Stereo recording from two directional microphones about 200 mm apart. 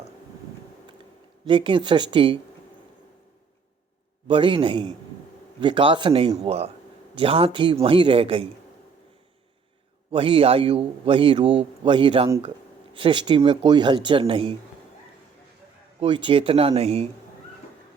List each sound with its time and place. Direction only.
1.5 s a man's voice: 25° right (ahead or behind)
4.3 s a man's voice: 25° right (ahead or behind)
10.1 s a man's voice: 25° right (ahead or behind)
16.0 s a man's voice: 25° right (ahead or behind)